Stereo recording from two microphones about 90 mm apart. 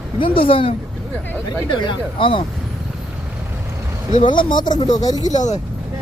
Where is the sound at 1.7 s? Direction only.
65° left (ahead or behind).